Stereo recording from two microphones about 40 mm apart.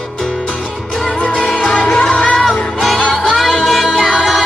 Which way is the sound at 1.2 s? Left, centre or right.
Left.